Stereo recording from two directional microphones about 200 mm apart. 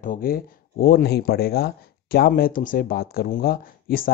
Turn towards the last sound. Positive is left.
turn(degrees=45)  # may be behind; listen again after turning